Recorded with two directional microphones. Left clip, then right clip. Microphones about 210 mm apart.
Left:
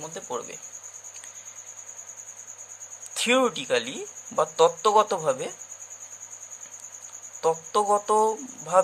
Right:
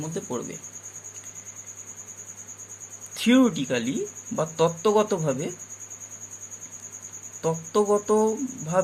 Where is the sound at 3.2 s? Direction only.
20° left (ahead or behind).